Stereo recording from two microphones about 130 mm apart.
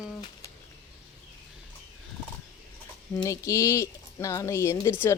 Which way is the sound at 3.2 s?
25° left (ahead or behind).